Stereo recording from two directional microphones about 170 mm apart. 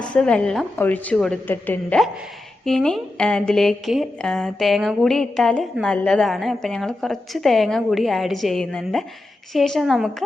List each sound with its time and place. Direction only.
0.0 s a woman's voice: 5° left (ahead or behind)